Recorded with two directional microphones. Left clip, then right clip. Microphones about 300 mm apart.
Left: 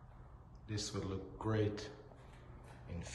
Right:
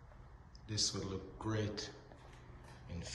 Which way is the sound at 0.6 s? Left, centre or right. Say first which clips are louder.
Right 4 dB; centre.